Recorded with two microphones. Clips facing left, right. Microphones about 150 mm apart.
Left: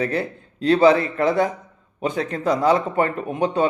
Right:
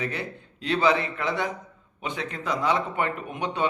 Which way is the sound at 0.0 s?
40° left (ahead or behind).